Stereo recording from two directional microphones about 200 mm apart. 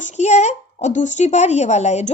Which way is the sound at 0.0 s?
35° left (ahead or behind).